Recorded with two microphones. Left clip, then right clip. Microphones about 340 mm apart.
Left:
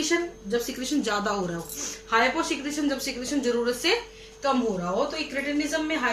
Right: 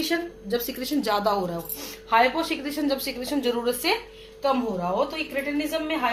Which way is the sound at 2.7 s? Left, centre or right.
Centre.